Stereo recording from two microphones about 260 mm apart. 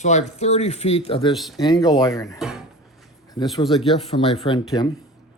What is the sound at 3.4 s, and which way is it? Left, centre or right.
Speech, centre.